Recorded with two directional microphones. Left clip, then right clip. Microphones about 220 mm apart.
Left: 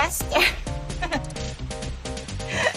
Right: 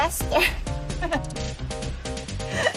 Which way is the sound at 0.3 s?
30° right (ahead or behind).